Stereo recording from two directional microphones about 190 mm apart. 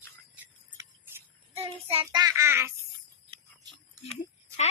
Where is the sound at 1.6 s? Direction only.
30° right (ahead or behind).